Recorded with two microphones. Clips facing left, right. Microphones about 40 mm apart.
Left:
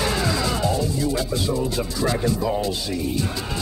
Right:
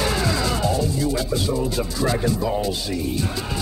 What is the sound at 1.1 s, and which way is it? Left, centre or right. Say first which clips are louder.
Music: right 1 dB; centre.